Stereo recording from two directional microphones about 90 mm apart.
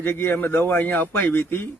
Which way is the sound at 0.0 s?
25° left (ahead or behind).